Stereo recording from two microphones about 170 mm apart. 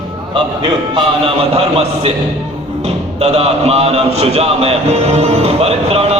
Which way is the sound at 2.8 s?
40° right (ahead or behind).